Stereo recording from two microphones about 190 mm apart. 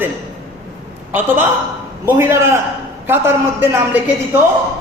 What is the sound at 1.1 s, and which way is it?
A man's voice, 10° right (ahead or behind).